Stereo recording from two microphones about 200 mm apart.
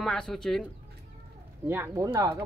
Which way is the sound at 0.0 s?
Centre (ahead or behind).